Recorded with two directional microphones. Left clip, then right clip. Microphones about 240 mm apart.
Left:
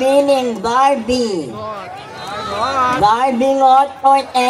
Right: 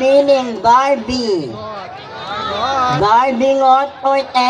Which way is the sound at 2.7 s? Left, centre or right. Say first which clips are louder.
Even; left.